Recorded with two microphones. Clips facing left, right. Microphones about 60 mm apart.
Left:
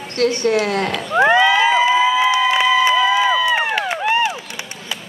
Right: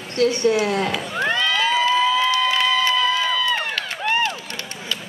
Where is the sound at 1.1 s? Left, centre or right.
Centre.